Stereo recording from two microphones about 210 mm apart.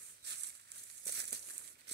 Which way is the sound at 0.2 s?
55° right (ahead or behind).